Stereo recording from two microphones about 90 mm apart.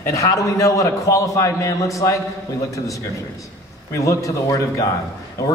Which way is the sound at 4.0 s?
35° left (ahead or behind).